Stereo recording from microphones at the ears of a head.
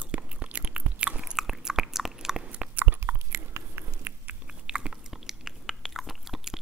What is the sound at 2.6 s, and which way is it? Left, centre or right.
Biting, right.